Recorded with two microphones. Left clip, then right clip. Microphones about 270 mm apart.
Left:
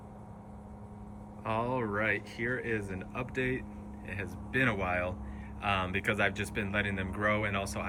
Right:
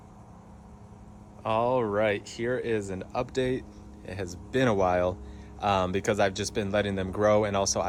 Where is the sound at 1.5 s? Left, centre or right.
Centre.